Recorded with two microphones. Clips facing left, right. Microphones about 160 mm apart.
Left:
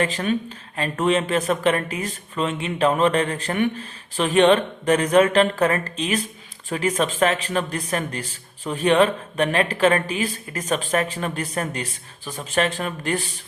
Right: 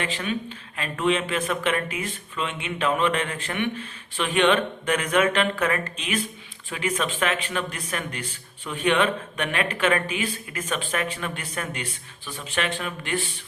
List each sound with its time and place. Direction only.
0.0 s speech: 40° left (ahead or behind)